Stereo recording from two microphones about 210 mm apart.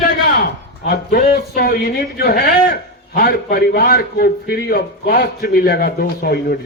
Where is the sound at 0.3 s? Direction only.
45° left (ahead or behind).